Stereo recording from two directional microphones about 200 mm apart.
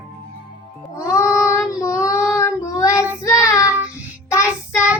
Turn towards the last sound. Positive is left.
turn(degrees=15)  # may be behind; listen again after turning